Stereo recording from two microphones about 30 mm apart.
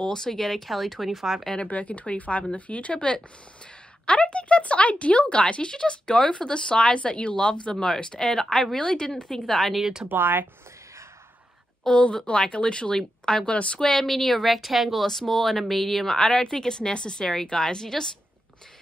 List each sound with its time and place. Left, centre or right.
0.0 s a woman's voice: left
0.4 s speech: centre
1.7 s speech: left
4.0 s speech: left
5.7 s speech: left
7.7 s a woman's voice: centre
9.5 s speech: centre
10.0 s speech: right
11.9 s speech: left
13.5 s speech: left
13.7 s speech: centre
14.4 s speech: centre
15.0 s speech: centre
16.3 s a woman's voice: left